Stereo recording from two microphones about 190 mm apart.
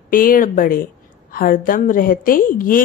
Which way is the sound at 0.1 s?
45° left (ahead or behind).